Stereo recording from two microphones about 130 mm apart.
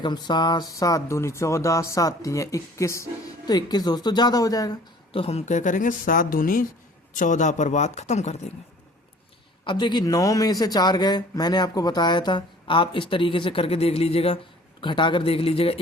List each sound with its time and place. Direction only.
0.0 s speech: 35° left (ahead or behind)
5.1 s speech: 50° left (ahead or behind); by 6.7 s 90° left
7.1 s speech: 75° left (ahead or behind); by 8.5 s 60° left (ahead or behind)
9.6 s speech: 35° left (ahead or behind)
14.8 s speech: 40° left (ahead or behind)